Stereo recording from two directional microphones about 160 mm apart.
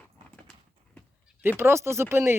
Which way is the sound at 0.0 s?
10° left (ahead or behind).